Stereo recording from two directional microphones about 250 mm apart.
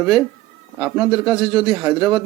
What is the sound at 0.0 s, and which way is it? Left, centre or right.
Speech, centre.